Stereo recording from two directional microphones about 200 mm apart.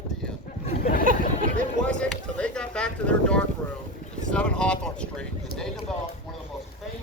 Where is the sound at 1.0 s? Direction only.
45° right (ahead or behind).